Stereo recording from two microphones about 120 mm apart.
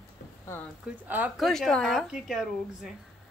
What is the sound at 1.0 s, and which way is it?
Speech, 15° right (ahead or behind).